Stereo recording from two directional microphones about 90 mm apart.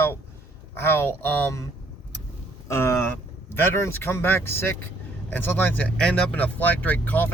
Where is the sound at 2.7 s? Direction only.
30° left (ahead or behind).